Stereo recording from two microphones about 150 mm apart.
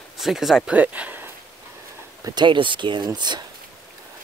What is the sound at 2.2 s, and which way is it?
Speech, 30° right (ahead or behind).